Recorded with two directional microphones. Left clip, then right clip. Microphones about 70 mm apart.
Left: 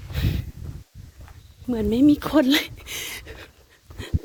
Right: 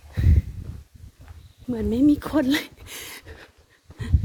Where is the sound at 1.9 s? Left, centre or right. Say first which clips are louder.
Left 2 dB; right.